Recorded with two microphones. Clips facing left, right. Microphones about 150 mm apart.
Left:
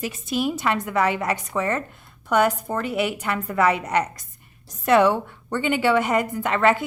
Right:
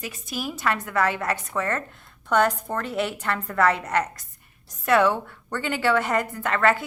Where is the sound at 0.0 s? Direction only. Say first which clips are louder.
Left 7 dB; 25° left (ahead or behind).